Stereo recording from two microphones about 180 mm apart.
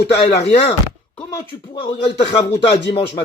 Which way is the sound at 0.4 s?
30° left (ahead or behind).